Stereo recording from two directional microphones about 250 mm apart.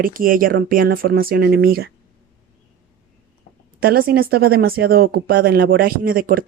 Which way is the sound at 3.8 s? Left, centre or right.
Right.